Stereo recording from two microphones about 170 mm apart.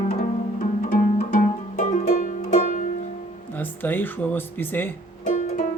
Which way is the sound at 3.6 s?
10° left (ahead or behind).